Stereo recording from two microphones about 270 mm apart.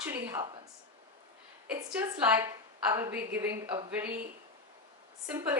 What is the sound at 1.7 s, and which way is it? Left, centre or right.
A woman's voice, centre.